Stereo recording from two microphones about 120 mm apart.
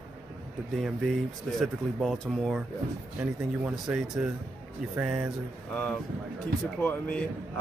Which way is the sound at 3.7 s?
10° right (ahead or behind).